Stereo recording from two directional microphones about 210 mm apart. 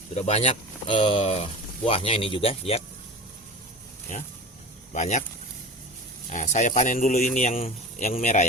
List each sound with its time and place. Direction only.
0.1 s speech: 30° left (ahead or behind)
4.1 s speech: 40° left (ahead or behind)
6.3 s speech: 35° left (ahead or behind)